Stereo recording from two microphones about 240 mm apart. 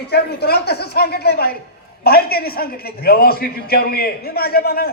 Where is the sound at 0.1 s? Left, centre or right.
Left.